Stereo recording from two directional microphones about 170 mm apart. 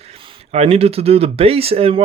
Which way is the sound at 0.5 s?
35° right (ahead or behind).